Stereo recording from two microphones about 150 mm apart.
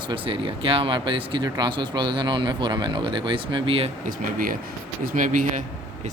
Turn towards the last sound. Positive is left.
turn(degrees=-60)  # may be behind; listen again after turning